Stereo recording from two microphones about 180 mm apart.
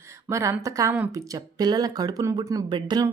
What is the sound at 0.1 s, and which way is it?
Speech, 15° right (ahead or behind).